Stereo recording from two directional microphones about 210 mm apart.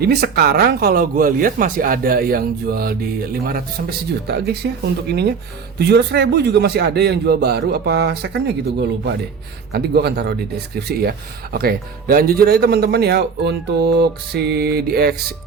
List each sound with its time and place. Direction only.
0.0 s speech: 50° right (ahead or behind)